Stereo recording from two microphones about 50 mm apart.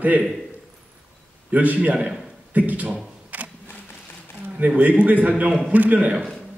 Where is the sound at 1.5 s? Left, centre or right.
Right.